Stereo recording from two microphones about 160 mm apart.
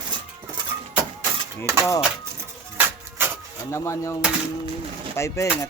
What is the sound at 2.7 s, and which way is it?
Printer, 15° right (ahead or behind).